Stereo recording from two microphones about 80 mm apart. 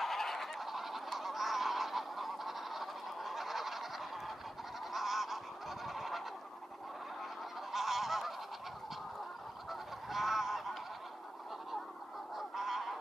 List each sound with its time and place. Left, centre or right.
0.0 s goose: centre
4.9 s goose: centre
7.7 s goose: centre
9.7 s goose: centre
12.4 s goose: centre